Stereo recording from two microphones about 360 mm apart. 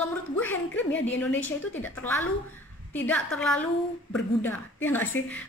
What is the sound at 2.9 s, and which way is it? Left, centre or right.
A woman's voice, centre.